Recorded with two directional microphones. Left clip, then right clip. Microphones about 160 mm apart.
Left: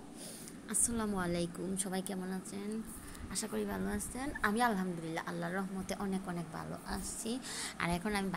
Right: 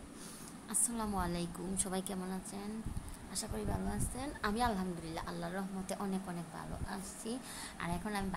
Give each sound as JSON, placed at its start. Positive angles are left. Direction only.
{"t": 0.7, "sound": "a woman's voice", "side_deg": 15}